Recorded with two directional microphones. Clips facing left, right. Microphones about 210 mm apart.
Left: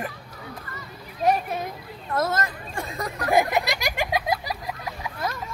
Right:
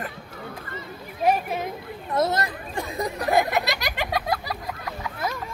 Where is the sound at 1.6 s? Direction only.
20° right (ahead or behind).